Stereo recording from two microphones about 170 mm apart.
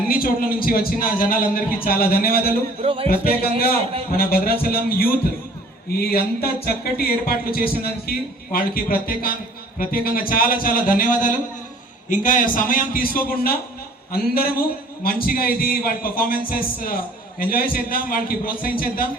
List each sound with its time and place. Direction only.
0.1 s speech: 60° left (ahead or behind)
2.8 s speech: 35° right (ahead or behind)
4.2 s speech: 60° left (ahead or behind)